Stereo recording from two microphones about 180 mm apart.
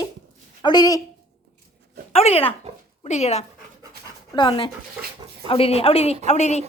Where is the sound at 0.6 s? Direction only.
25° left (ahead or behind).